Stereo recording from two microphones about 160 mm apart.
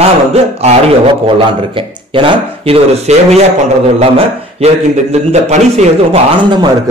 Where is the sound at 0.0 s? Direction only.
40° right (ahead or behind).